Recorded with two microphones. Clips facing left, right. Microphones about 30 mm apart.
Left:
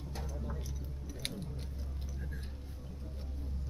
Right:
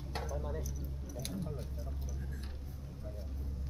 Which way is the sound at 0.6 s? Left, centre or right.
Left.